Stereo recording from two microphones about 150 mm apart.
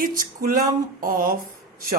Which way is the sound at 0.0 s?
65° right (ahead or behind).